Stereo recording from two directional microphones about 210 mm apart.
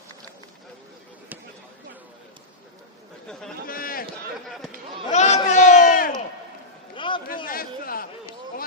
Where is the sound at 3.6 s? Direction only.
45° left (ahead or behind).